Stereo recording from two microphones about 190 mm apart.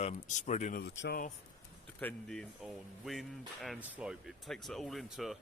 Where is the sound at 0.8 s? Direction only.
60° left (ahead or behind).